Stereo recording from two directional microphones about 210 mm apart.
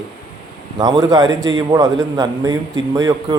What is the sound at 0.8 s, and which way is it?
A man's voice, 20° right (ahead or behind).